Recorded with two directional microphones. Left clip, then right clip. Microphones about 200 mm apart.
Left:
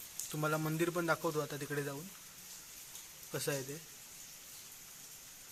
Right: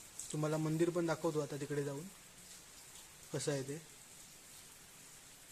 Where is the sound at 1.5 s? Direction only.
20° right (ahead or behind).